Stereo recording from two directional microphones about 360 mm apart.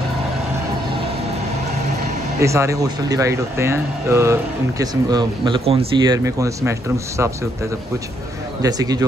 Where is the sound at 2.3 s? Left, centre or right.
Centre.